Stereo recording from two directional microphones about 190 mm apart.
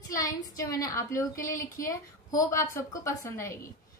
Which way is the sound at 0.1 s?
15° left (ahead or behind).